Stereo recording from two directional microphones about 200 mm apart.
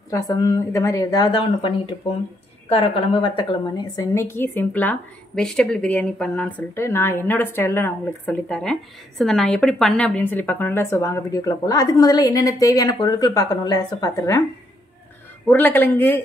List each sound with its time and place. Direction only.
0.1 s a woman's voice: 15° left (ahead or behind)
15.4 s a woman's voice: 10° left (ahead or behind)